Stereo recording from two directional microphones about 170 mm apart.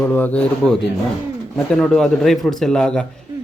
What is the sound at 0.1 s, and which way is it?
A man's voice, 10° left (ahead or behind).